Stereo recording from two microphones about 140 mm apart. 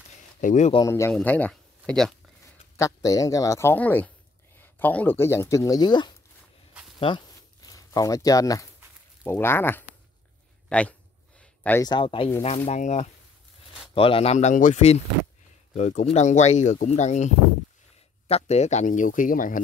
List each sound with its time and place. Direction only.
0.4 s speech: 60° left (ahead or behind)
0.8 s speech: 20° left (ahead or behind); by 2.1 s 5° left (ahead or behind)
2.8 s speech: 25° left (ahead or behind)
7.6 s speech: 25° left (ahead or behind)
10.7 s a sound: 10° left (ahead or behind)
11.8 s speech: 35° left (ahead or behind)
12.6 s speech: 55° left (ahead or behind)
13.9 s speech: 40° left (ahead or behind)
18.3 s speech: 50° left (ahead or behind); by 19.6 s 75° left (ahead or behind)